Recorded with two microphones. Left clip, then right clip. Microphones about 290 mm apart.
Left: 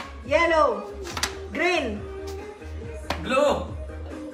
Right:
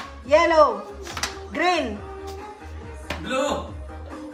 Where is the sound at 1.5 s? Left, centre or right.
Right.